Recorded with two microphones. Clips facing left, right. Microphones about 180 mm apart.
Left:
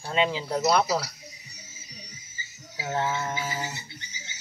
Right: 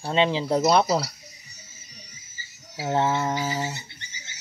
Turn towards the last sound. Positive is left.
turn(degrees=-25)  # may be behind; listen again after turning